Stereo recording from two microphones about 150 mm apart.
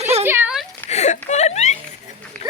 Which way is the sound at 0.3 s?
15° right (ahead or behind).